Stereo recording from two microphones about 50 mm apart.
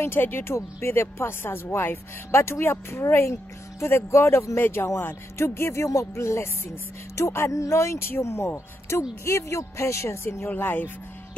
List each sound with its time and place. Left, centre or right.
0.0 s speech: left
0.6 s speech: left
8.0 s speech: left
9.2 s speech: left
10.5 s speech: left